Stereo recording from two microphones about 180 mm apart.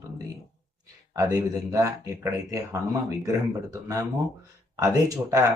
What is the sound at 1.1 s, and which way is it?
Speech, 15° right (ahead or behind).